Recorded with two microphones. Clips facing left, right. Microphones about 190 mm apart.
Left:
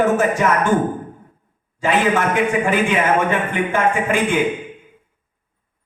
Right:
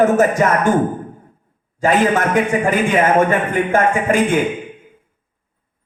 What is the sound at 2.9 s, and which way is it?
A man's voice, 40° right (ahead or behind).